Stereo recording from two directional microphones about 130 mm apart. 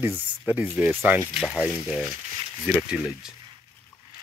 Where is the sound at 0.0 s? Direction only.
15° right (ahead or behind).